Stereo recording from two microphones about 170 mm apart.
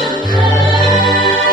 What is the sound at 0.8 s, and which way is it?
Music, centre (ahead or behind).